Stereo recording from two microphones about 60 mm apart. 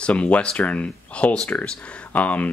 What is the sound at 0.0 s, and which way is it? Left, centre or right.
Speech, left.